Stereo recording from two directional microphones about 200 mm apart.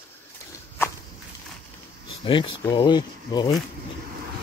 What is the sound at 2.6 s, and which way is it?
Speech, 20° left (ahead or behind).